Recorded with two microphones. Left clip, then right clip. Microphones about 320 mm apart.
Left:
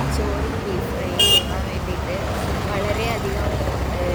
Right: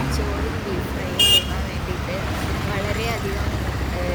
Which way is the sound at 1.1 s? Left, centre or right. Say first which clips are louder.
Even; left.